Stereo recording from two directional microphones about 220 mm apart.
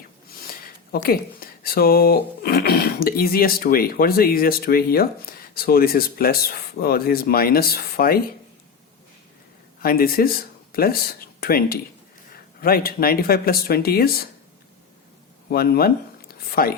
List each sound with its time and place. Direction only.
0.9 s speech: 45° left (ahead or behind)
9.8 s speech: 40° left (ahead or behind)
15.4 s speech: 45° left (ahead or behind)